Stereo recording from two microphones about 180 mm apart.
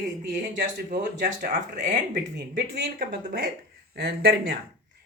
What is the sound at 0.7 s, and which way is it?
Speech, 65° right (ahead or behind).